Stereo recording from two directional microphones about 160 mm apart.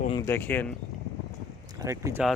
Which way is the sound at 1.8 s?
20° right (ahead or behind).